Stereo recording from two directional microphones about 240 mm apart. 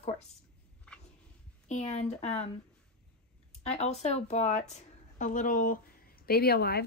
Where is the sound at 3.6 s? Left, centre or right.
Left.